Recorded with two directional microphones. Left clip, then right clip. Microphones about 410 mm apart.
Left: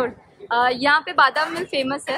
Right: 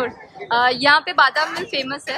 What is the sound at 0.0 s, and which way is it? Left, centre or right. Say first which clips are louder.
A woman's voice: even; centre.